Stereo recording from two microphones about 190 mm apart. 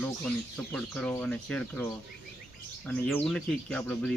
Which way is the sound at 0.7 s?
5° left (ahead or behind).